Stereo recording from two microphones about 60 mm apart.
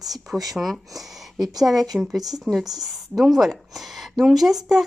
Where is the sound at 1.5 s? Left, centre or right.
Right.